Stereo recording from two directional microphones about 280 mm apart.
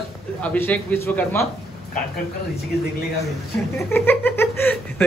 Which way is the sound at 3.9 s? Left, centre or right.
Centre.